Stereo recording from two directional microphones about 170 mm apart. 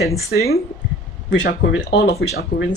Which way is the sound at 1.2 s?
90° left.